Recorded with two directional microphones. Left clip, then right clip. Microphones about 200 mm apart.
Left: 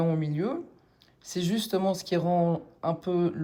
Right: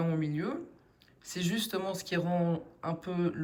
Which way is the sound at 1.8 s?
25° left (ahead or behind).